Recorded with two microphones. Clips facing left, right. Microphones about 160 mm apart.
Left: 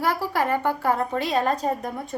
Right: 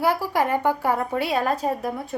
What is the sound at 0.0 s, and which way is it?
A woman's voice, 15° right (ahead or behind).